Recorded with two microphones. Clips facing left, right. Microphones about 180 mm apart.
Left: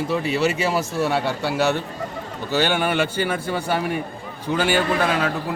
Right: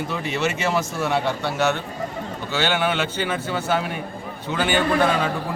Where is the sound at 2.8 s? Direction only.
10° left (ahead or behind).